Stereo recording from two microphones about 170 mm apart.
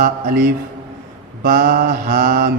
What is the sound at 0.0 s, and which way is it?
Mantra, 60° right (ahead or behind).